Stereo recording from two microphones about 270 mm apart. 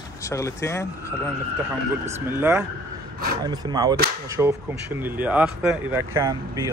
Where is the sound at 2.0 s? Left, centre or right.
Centre.